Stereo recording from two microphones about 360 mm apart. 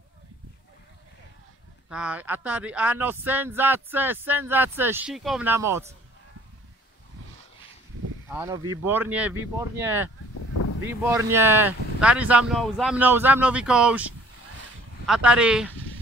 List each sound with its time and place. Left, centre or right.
1.9 s speech: centre
8.3 s speech: centre
15.0 s speech: centre